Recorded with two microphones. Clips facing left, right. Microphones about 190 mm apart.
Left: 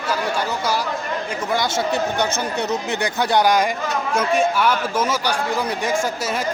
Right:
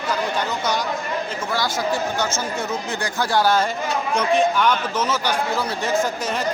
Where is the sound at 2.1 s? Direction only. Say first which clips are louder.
Left 2 dB; 60° left (ahead or behind).